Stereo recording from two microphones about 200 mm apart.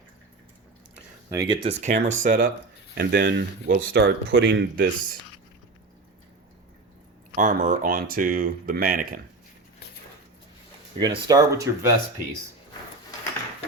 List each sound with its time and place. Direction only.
1.3 s speech: 15° right (ahead or behind)
1.6 s speech: 35° right (ahead or behind)
2.9 s speech: 55° right (ahead or behind)
7.3 s speech: 40° right (ahead or behind)
10.9 s speech: 20° right (ahead or behind)